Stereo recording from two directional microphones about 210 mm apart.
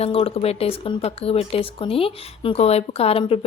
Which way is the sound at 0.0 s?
30° left (ahead or behind).